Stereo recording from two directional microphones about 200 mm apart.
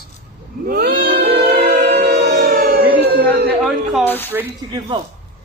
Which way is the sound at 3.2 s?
55° right (ahead or behind).